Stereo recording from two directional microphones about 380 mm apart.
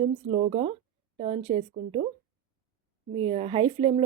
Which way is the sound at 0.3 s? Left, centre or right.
Centre.